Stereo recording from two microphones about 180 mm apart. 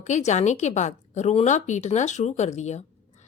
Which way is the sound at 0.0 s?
40° left (ahead or behind).